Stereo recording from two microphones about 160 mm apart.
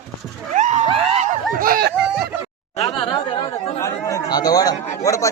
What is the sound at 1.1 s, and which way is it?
Snicker, 45° right (ahead or behind).